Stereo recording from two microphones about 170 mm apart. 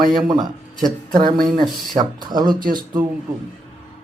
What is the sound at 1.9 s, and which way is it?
Speech, 25° right (ahead or behind).